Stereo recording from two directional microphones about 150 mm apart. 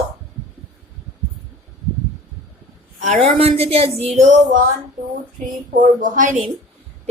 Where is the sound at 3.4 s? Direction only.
40° right (ahead or behind).